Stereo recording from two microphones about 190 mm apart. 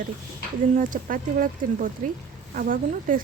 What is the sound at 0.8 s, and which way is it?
Speech, 45° right (ahead or behind).